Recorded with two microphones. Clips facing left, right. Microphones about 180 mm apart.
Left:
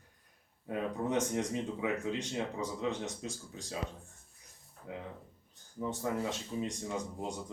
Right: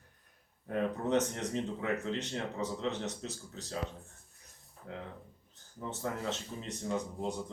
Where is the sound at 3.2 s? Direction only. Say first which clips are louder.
Left 1 dB; 10° left (ahead or behind).